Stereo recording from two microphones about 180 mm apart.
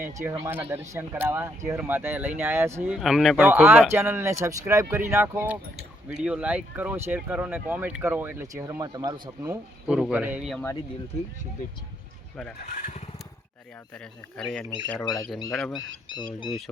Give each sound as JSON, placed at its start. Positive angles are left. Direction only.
{"t": 0.0, "sound": "speech", "side_deg": -15}
{"t": 9.8, "sound": "speech", "side_deg": -5}
{"t": 12.7, "sound": "speech", "side_deg": 45}
{"t": 13.9, "sound": "speech", "side_deg": 5}
{"t": 15.1, "sound": "speech", "side_deg": -90}
{"t": 15.4, "sound": "speech", "side_deg": 5}
{"t": 15.8, "sound": "speech", "side_deg": -90}